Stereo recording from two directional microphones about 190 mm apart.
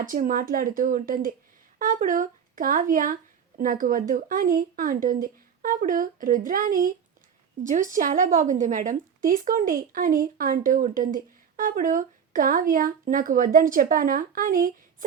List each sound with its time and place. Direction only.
0.0 s a woman's voice: 45° right (ahead or behind)